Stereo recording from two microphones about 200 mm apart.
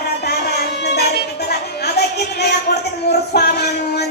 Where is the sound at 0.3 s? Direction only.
55° left (ahead or behind).